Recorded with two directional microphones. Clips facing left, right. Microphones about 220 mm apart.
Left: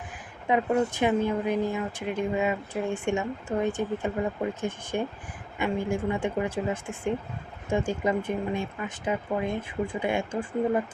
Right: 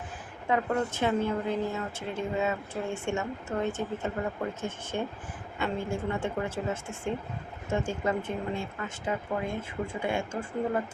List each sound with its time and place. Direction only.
0.4 s a woman's voice: 15° left (ahead or behind)